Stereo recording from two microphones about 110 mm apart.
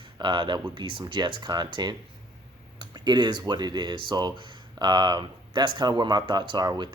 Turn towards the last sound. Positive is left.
turn(degrees=-40)  # may be behind; listen again after turning